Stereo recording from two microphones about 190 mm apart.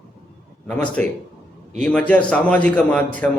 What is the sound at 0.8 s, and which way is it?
A man's voice, 5° left (ahead or behind).